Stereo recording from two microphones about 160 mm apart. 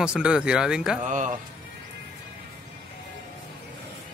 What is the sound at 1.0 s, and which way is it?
Speech, 50° right (ahead or behind).